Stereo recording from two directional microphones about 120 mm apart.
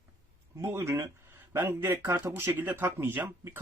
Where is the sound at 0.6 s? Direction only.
25° right (ahead or behind).